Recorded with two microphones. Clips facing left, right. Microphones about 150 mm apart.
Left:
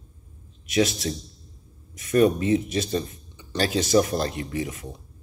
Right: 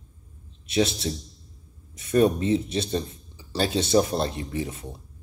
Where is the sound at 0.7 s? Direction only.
30° right (ahead or behind).